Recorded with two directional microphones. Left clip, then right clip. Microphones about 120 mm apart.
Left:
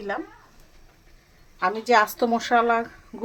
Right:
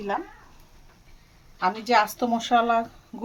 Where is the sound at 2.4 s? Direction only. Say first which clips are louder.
Even; 5° left (ahead or behind).